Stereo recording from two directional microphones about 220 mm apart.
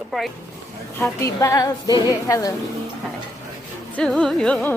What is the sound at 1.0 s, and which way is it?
A woman's voice, 10° left (ahead or behind).